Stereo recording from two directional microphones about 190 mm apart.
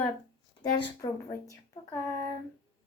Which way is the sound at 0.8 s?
20° left (ahead or behind).